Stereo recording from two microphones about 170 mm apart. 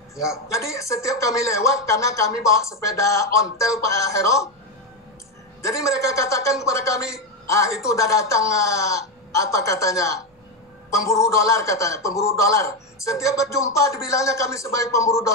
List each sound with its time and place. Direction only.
0.1 s a man's voice: 20° left (ahead or behind)
5.7 s a man's voice: 20° left (ahead or behind)